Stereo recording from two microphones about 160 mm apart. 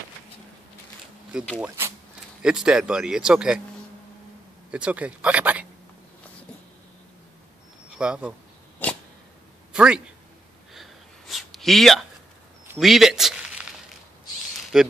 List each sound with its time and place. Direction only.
1.6 s speech: 15° right (ahead or behind)
2.4 s speech: 5° right (ahead or behind)
4.6 s speech: 10° right (ahead or behind)
7.9 s speech: 5° right (ahead or behind)
8.8 s a sound: 10° left (ahead or behind)
9.7 s speech: 5° right (ahead or behind)
10.7 s a sound: centre (ahead or behind)
14.7 s speech: 5° right (ahead or behind)